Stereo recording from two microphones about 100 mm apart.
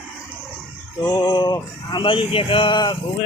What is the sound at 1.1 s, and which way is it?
Speech, 45° left (ahead or behind).